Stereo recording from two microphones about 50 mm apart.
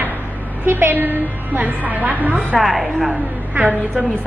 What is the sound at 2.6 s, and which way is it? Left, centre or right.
Speech, centre.